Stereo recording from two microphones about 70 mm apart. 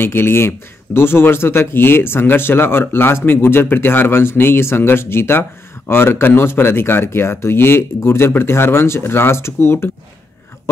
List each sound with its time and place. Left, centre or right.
0.0 s speech: left